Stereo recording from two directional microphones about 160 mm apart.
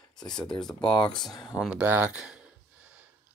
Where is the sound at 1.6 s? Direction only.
5° right (ahead or behind).